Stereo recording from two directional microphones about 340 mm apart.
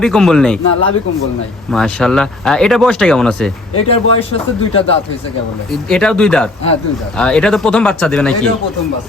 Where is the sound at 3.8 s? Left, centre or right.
Centre.